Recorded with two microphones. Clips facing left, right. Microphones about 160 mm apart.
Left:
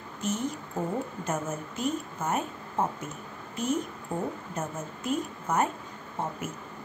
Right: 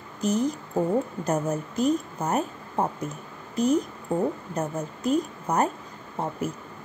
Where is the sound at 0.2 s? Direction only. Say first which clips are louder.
Right 6 dB; 35° right (ahead or behind).